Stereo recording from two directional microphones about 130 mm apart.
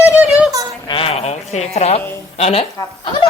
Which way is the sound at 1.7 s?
55° left (ahead or behind).